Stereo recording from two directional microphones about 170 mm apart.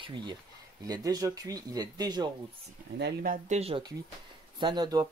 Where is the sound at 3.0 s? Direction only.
55° right (ahead or behind).